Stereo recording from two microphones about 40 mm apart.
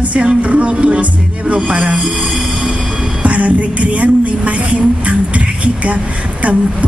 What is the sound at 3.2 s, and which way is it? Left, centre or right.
Music, right.